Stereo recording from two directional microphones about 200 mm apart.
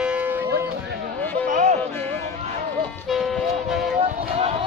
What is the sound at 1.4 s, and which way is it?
Music, 40° right (ahead or behind).